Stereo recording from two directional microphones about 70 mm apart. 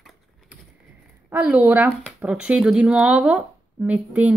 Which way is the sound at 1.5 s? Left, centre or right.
Right.